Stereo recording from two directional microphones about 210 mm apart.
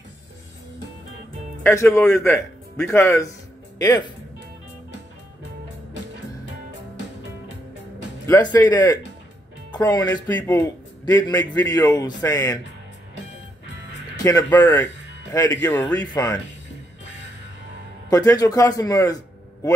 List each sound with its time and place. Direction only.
1.6 s speech: 10° left (ahead or behind)
8.3 s a man's voice: 20° left (ahead or behind)
14.1 s a man's voice: 15° left (ahead or behind)
18.1 s a man's voice: 15° left (ahead or behind)